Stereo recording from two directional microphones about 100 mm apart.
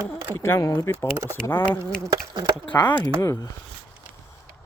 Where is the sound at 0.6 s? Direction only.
40° left (ahead or behind).